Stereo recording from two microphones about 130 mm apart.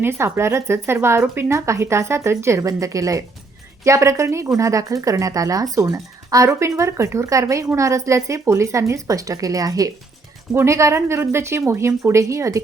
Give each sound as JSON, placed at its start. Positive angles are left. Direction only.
{"t": 0.0, "sound": "a woman's voice", "side_deg": -20}